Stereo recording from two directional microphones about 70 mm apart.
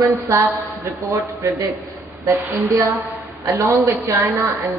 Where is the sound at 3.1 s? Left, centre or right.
Right.